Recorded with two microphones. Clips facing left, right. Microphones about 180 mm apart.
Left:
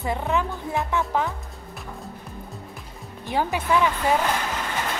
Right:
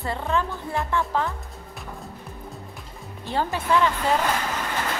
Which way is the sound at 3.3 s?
15° left (ahead or behind).